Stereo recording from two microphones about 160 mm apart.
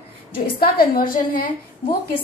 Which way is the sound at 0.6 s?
65° left (ahead or behind).